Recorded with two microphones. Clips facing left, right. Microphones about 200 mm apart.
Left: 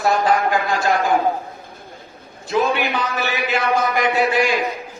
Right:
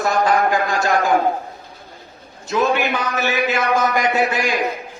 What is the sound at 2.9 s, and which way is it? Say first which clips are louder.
A man's voice: right 2 dB; 45° right (ahead or behind).